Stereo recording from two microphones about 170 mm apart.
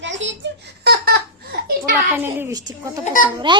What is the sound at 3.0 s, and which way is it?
Speech, 50° left (ahead or behind).